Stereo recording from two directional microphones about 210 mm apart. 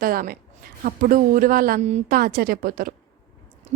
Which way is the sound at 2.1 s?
45° right (ahead or behind).